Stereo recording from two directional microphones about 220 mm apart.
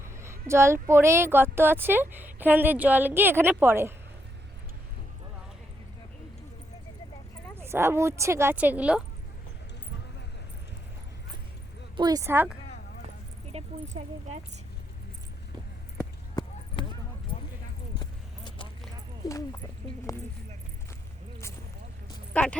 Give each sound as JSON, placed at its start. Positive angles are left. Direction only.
{"t": 0.2, "sound": "speech", "side_deg": -10}
{"t": 7.5, "sound": "speech", "side_deg": -10}
{"t": 11.9, "sound": "speech", "side_deg": -15}
{"t": 13.5, "sound": "speech", "side_deg": -30}
{"t": 16.4, "sound": "clip-clop", "side_deg": 20}
{"t": 18.0, "sound": "a sound", "side_deg": 20}
{"t": 19.2, "sound": "speech", "side_deg": 15}
{"t": 20.1, "sound": "a sound", "side_deg": 15}
{"t": 22.3, "sound": "a sound", "side_deg": 5}